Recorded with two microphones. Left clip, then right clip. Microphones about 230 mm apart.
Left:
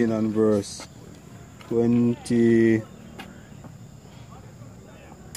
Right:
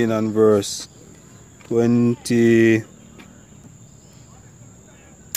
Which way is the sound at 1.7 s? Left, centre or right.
Right.